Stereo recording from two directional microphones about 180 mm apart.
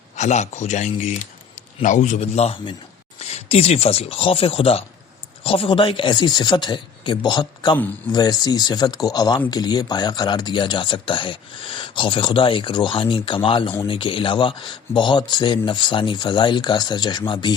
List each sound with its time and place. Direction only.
0.2 s speech: 40° left (ahead or behind)